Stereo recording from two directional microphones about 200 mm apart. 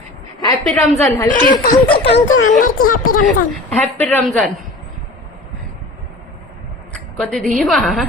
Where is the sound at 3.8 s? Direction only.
10° left (ahead or behind).